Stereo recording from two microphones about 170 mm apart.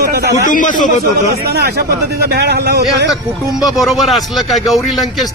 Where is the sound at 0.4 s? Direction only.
50° left (ahead or behind).